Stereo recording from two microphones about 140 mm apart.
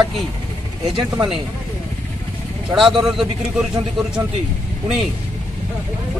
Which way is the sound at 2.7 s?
Centre (ahead or behind).